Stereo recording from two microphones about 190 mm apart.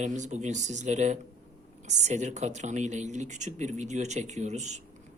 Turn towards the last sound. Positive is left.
turn(degrees=-35)  # may be behind; listen again after turning